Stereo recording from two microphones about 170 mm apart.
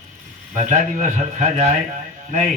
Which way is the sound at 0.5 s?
45° right (ahead or behind).